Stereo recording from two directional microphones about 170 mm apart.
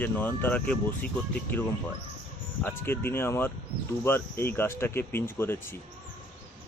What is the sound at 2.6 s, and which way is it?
Speech, 15° left (ahead or behind).